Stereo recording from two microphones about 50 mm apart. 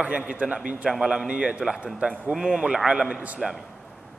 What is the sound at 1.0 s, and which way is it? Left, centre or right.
Speech, centre.